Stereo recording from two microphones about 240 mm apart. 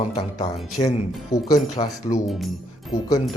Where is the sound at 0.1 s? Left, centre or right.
Left.